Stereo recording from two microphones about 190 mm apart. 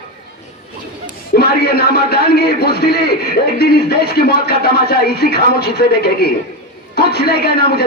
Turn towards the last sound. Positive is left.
turn(degrees=60)  # may be behind; listen again after turning